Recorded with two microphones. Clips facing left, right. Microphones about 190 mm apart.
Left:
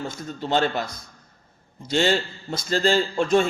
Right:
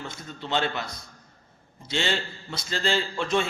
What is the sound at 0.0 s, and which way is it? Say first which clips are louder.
Speech: left 7 dB; 40° left (ahead or behind).